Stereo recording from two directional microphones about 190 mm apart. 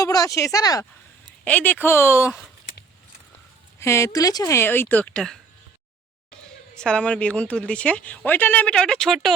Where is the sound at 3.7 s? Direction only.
15° left (ahead or behind).